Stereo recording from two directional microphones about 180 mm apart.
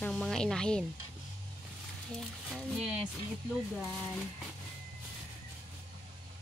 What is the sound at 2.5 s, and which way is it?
Speech, centre (ahead or behind).